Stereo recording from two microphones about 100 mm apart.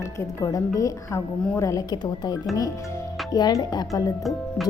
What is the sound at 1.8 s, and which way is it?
A woman's voice, 50° left (ahead or behind).